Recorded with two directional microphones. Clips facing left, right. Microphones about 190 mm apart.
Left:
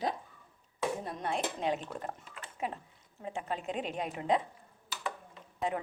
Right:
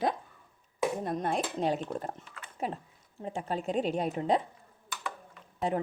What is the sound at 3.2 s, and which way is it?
Speech, 35° right (ahead or behind).